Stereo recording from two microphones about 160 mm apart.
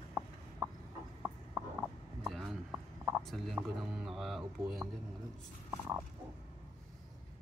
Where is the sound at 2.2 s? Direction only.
Centre (ahead or behind).